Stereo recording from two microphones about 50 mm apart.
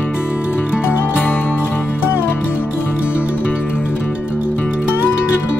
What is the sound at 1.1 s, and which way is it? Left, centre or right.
Music, left.